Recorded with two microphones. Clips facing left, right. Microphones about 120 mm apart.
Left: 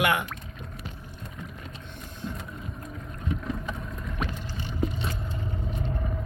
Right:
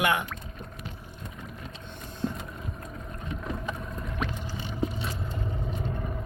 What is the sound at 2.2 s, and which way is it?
Vehicle, 35° right (ahead or behind).